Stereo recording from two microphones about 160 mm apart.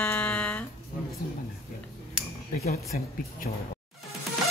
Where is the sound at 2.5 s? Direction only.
55° left (ahead or behind).